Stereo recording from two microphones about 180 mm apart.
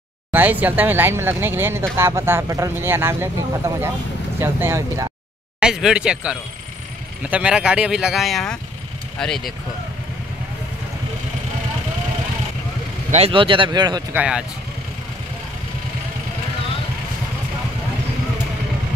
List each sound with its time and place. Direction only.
0.3 s speech: 10° right (ahead or behind)
5.6 s speech: 5° right (ahead or behind)
13.1 s speech: 30° right (ahead or behind)
14.1 s speech: 5° right (ahead or behind)